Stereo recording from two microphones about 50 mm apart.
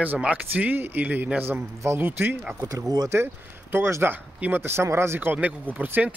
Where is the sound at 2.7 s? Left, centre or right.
Right.